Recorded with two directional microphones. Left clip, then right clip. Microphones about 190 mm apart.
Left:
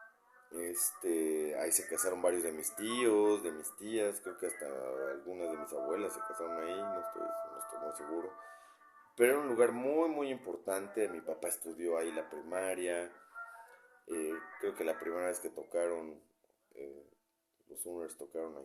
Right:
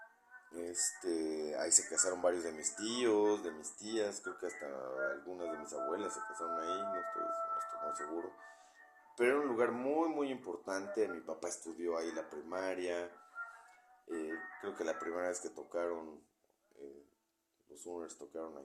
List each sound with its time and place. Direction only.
0.5 s speech: 25° left (ahead or behind)
14.1 s speech: 25° left (ahead or behind)
17.8 s speech: 30° left (ahead or behind)